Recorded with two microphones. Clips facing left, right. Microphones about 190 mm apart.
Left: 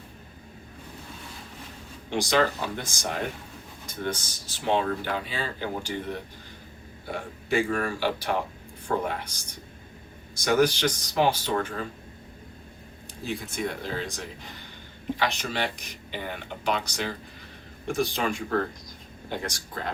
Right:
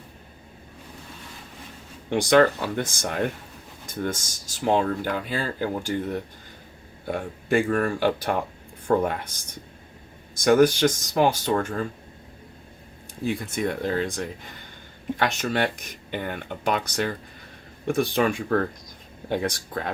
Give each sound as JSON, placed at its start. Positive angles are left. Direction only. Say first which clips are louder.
{"t": 2.0, "sound": "speech", "louder": "right 6 dB", "side_deg": -55}
{"t": 7.1, "sound": "speech", "louder": "right 4 dB", "side_deg": -55}
{"t": 10.4, "sound": "speech", "louder": "right 5 dB", "side_deg": -50}
{"t": 13.2, "sound": "speech", "louder": "right 5 dB", "side_deg": -55}